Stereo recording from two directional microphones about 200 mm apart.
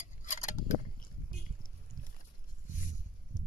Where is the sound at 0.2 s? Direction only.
40° left (ahead or behind).